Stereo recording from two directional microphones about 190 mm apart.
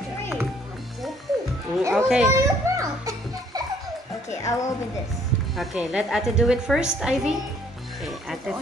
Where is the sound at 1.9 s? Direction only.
5° right (ahead or behind).